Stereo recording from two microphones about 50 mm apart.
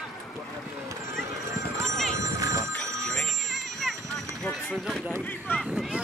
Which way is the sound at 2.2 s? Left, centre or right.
Right.